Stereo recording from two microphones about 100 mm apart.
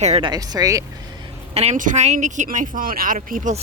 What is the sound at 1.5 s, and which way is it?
Speech, 90° right.